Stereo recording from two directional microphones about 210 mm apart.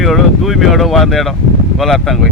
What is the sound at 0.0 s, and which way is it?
Speech, centre (ahead or behind).